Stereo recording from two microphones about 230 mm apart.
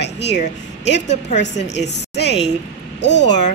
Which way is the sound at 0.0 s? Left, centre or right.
Left.